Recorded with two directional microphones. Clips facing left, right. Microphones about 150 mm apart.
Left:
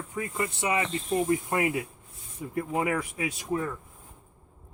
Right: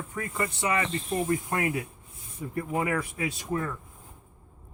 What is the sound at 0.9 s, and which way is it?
Speech, centre (ahead or behind).